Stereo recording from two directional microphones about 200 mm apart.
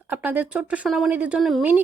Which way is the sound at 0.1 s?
10° right (ahead or behind).